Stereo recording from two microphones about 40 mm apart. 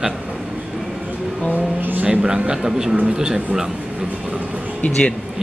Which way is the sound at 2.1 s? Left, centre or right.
Right.